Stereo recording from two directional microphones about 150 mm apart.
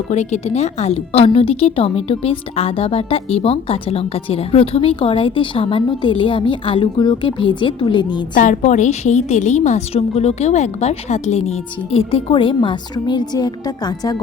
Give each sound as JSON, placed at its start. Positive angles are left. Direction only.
{"t": 0.1, "sound": "speech", "side_deg": 50}
{"t": 8.4, "sound": "a woman's voice", "side_deg": 55}